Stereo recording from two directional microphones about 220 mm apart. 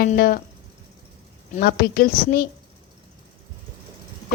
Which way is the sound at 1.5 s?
45° left (ahead or behind).